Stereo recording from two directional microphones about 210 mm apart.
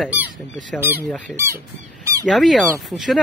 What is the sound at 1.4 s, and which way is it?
Speech, 10° right (ahead or behind).